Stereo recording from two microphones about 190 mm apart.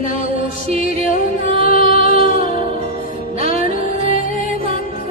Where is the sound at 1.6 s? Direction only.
30° right (ahead or behind).